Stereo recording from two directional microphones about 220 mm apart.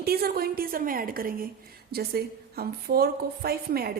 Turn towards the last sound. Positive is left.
turn(degrees=-45)  # may be behind; listen again after turning